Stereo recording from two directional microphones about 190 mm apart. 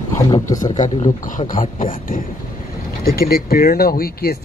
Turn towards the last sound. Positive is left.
turn(degrees=50)  # may be behind; listen again after turning